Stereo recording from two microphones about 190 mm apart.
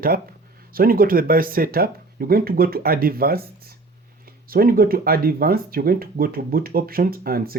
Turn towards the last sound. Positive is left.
turn(degrees=-50)  # may be behind; listen again after turning